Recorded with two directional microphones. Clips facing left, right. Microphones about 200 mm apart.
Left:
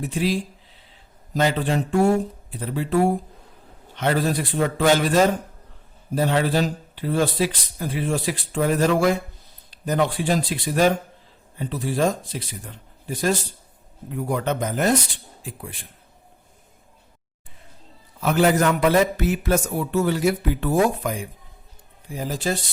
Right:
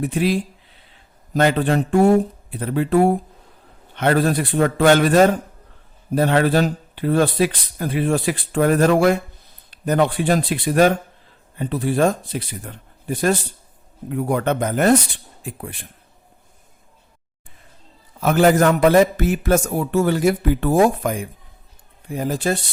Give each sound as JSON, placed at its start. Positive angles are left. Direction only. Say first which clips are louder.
{"t": 0.0, "sound": "speech", "louder": "right 4 dB", "side_deg": -60}
{"t": 18.2, "sound": "a man's voice", "louder": "right 4 dB", "side_deg": -45}